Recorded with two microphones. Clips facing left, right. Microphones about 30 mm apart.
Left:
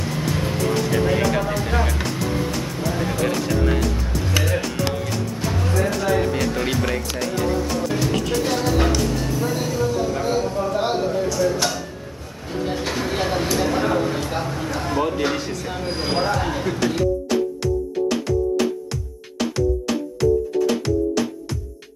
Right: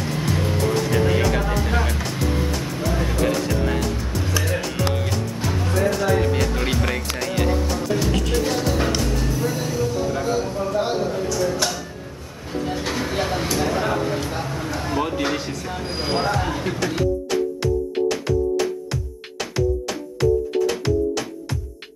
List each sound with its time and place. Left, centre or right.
0.0 s music: centre
0.7 s speech: centre
2.0 s music: centre
5.9 s speech: centre
7.6 s music: centre
9.0 s speech: centre
12.8 s speech: centre
16.9 s music: centre